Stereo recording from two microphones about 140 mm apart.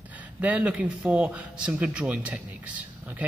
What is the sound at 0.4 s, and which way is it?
Speech, 10° right (ahead or behind).